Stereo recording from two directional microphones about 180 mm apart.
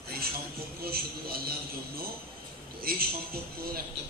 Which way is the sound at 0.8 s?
60° right (ahead or behind).